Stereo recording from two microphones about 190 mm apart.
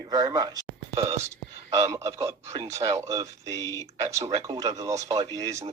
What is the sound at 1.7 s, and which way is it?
Speech, 15° right (ahead or behind).